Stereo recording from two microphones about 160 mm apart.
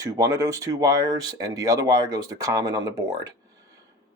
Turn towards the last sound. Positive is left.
turn(degrees=-20)  # may be behind; listen again after turning